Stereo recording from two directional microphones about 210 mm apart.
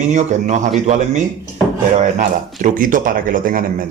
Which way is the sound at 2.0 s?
40° right (ahead or behind).